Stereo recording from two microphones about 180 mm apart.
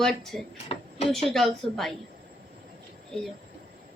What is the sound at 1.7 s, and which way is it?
Speech, centre (ahead or behind).